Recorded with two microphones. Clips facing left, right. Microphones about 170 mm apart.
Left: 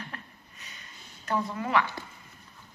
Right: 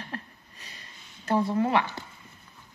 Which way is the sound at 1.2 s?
30° right (ahead or behind).